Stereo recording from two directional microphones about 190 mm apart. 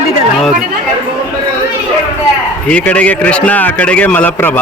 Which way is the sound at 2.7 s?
5° left (ahead or behind).